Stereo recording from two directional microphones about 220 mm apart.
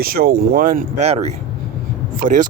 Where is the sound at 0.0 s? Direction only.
40° right (ahead or behind).